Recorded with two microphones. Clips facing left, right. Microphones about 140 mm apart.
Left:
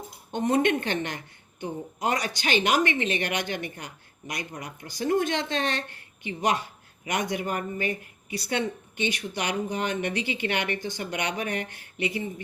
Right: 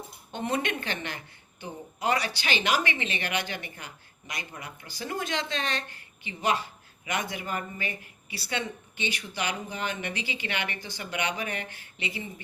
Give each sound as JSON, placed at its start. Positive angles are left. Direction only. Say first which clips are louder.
{"t": 0.3, "sound": "a woman's voice", "louder": "left 7 dB", "side_deg": 50}